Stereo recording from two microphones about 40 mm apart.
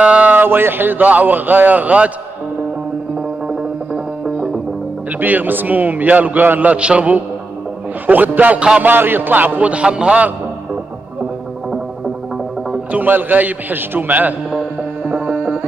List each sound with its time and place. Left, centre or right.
0.0 s music: right
0.4 s music: right
1.0 s a man's voice: right
3.4 s music: centre
5.2 s a man's voice: right
6.7 s a man's voice: right
8.1 s a man's voice: right
8.5 s a man's voice: right
8.8 s a man's voice: right
9.7 s a man's voice: right
12.9 s a man's voice: right
15.0 s music: right